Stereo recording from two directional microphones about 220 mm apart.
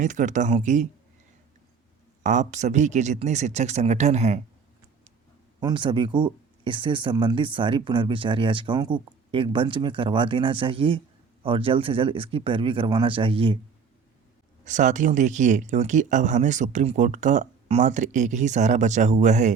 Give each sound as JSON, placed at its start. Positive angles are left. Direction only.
{"t": 0.0, "sound": "speech", "side_deg": -35}
{"t": 2.2, "sound": "speech", "side_deg": -35}
{"t": 5.5, "sound": "speech", "side_deg": -20}
{"t": 14.6, "sound": "speech", "side_deg": -35}